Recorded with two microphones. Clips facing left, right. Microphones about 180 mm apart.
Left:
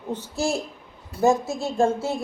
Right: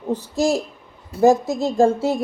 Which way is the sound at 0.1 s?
35° right (ahead or behind).